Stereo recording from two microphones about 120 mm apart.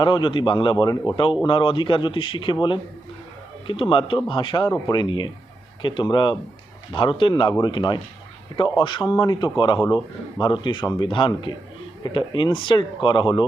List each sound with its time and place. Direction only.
0.0 s a man's voice: 40° left (ahead or behind)